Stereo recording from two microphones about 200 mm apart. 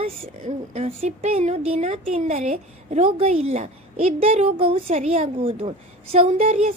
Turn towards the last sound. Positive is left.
turn(degrees=-35)  # may be behind; listen again after turning